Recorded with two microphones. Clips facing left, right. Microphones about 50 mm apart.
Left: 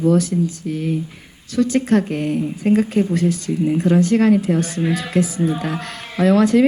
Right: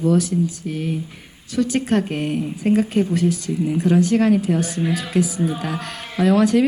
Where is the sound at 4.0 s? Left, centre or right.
Left.